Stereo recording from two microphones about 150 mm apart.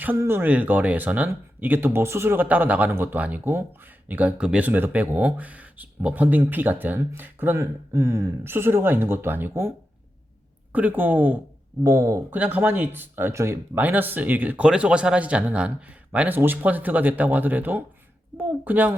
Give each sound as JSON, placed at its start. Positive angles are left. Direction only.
{"t": 0.0, "sound": "speech", "side_deg": -15}